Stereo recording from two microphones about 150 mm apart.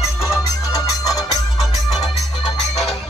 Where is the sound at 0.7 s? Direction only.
25° left (ahead or behind).